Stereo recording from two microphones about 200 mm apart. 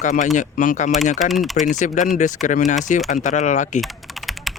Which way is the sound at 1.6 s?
40° left (ahead or behind).